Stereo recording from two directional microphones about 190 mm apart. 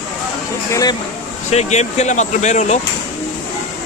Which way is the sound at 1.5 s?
35° left (ahead or behind).